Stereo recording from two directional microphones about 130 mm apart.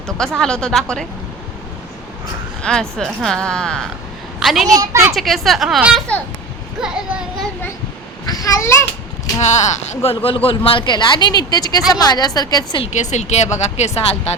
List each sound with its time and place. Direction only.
0.2 s speech: 5° left (ahead or behind)
2.6 s a woman's voice: 5° left (ahead or behind)
4.8 s a child's voice: 20° right (ahead or behind)
5.1 s speech: centre (ahead or behind)
8.3 s speech: 30° left (ahead or behind)
9.4 s speech: 65° left (ahead or behind)
10.2 s speech: 45° left (ahead or behind)
12.9 s speech: 65° left (ahead or behind)